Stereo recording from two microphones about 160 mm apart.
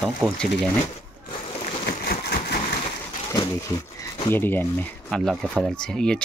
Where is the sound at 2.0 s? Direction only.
80° left.